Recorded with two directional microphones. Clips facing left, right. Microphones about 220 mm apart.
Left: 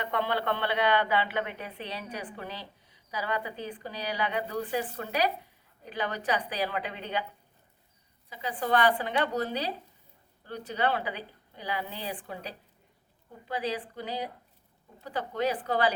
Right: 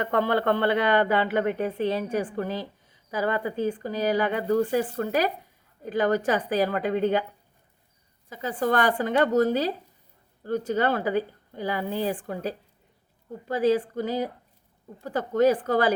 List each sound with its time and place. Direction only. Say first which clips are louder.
0.0 s a woman's voice: right 7 dB; 45° right (ahead or behind)
8.3 s a woman's voice: right 4 dB; 45° right (ahead or behind)